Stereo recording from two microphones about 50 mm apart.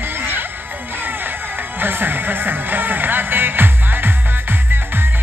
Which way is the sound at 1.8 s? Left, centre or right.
Right.